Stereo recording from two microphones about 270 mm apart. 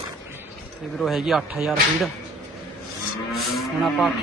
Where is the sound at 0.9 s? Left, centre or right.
Centre.